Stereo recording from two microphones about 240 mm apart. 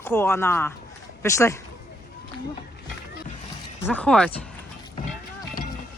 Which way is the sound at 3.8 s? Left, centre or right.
Centre.